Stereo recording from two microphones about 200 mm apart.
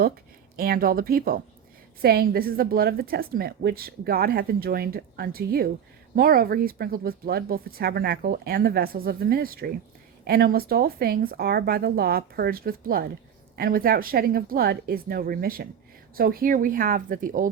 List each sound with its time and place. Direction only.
0.5 s a woman's voice: 45° right (ahead or behind)